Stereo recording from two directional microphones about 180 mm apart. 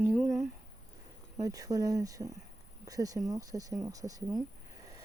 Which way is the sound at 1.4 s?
20° right (ahead or behind).